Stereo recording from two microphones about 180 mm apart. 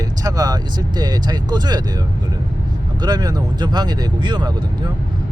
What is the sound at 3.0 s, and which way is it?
Speech, 20° right (ahead or behind).